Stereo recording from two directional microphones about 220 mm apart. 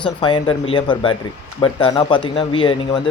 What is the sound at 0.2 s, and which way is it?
Speech, 25° left (ahead or behind).